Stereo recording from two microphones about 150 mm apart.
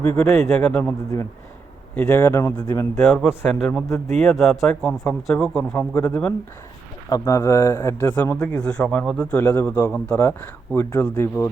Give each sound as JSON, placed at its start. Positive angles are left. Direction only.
{"t": 0.0, "sound": "speech", "side_deg": 10}
{"t": 2.0, "sound": "speech", "side_deg": 15}
{"t": 3.0, "sound": "a man's voice", "side_deg": 0}
{"t": 3.8, "sound": "speech", "side_deg": 20}
{"t": 4.2, "sound": "a man's voice", "side_deg": 0}
{"t": 7.1, "sound": "speech", "side_deg": 20}
{"t": 8.4, "sound": "a man's voice", "side_deg": 5}
{"t": 9.4, "sound": "speech", "side_deg": 15}